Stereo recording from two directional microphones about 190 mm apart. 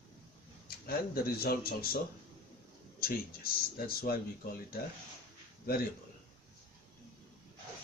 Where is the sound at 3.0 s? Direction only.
50° left (ahead or behind).